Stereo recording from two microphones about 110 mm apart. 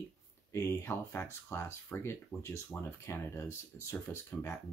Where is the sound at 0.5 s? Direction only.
25° left (ahead or behind).